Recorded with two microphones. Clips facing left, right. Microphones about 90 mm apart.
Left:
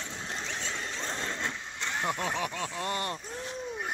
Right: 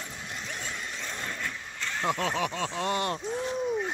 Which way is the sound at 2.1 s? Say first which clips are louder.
Right 5 dB; 10° left (ahead or behind).